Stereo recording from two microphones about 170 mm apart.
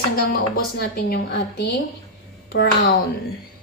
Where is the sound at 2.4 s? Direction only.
85° left.